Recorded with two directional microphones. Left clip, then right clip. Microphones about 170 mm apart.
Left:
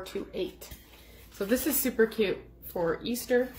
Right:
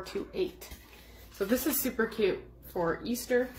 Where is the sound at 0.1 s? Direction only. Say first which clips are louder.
Right 2 dB; centre (ahead or behind).